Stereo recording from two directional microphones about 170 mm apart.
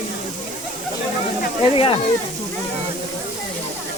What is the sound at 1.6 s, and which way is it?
Speech, 35° left (ahead or behind).